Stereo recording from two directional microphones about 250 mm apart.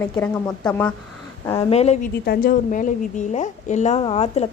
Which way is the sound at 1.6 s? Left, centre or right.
Left.